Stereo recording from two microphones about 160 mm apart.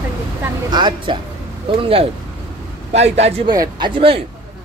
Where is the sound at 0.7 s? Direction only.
30° right (ahead or behind).